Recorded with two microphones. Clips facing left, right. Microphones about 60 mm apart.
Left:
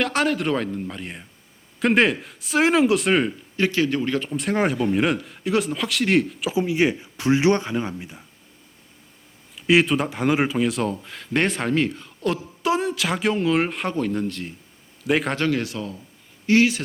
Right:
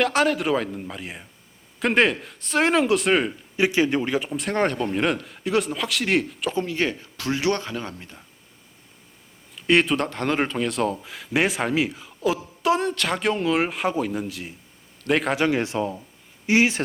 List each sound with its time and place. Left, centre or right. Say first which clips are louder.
0.0 s speech: right 1 dB; centre
3.6 s speech: right 1 dB; centre
4.4 s speech: left 2 dB; centre
9.6 s speech: left 1 dB; centre
15.4 s speech: right 2 dB; centre